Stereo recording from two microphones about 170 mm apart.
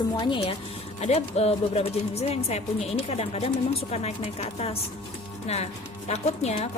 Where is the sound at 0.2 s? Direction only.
25° left (ahead or behind).